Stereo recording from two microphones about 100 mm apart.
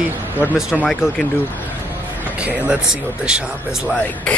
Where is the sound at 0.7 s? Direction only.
5° left (ahead or behind).